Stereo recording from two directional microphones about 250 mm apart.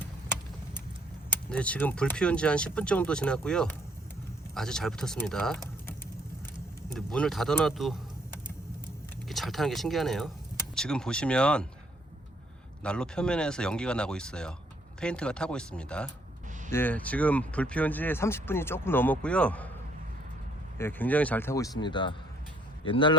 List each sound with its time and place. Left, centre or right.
1.3 s speech: centre
6.9 s speech: centre
9.3 s speech: centre
12.8 s speech: centre
20.7 s speech: centre